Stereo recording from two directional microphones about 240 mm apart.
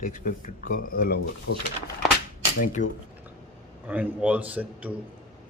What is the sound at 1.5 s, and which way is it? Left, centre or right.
Speech, left.